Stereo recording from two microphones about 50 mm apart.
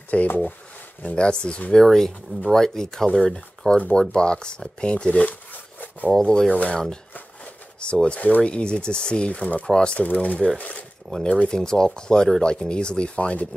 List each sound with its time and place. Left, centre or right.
0.1 s speech: left
1.7 s speech: centre
3.7 s speech: left
5.5 s a sound: left
6.1 s speech: centre
7.8 s speech: left
9.9 s speech: left
11.1 s speech: centre; by 13.5 s left